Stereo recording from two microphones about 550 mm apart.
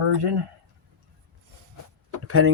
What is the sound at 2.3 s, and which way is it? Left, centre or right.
Speech, right.